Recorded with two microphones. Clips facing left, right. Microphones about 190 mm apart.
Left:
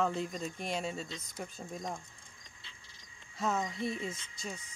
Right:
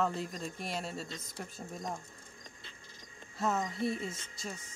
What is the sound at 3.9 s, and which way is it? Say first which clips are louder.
Speech: even; 45° right (ahead or behind).